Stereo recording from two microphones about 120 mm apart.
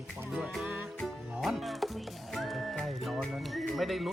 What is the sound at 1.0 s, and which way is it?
Speech, centre (ahead or behind).